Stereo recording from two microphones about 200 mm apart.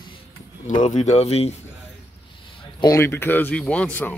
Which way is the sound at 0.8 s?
35° left (ahead or behind).